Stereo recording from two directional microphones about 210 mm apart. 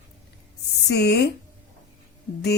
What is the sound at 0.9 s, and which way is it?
Speech, 50° left (ahead or behind).